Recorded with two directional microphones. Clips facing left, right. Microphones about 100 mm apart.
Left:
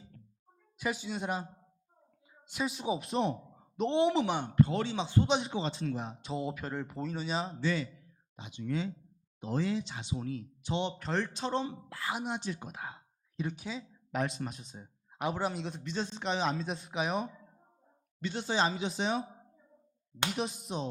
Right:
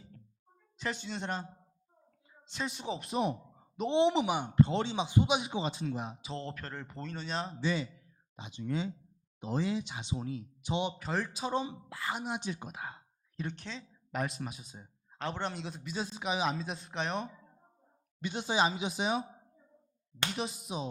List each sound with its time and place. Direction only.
0.8 s speech: 5° left (ahead or behind)
2.5 s speech: 5° left (ahead or behind)
3.1 s speech: 5° right (ahead or behind)
3.9 s speech: 20° right (ahead or behind)
4.5 s speech: 25° right (ahead or behind)
6.2 s speech: 5° left (ahead or behind)
7.6 s speech: 20° right (ahead or behind)
12.0 s a man's voice: centre (ahead or behind)
12.4 s speech: 15° right (ahead or behind)
12.7 s speech: centre (ahead or behind)
15.1 s a man's voice: 10° left (ahead or behind)
18.2 s speech: 15° right (ahead or behind)
20.3 s a man's voice: centre (ahead or behind)